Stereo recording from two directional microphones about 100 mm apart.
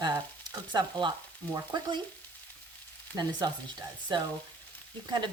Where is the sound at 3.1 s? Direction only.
40° right (ahead or behind).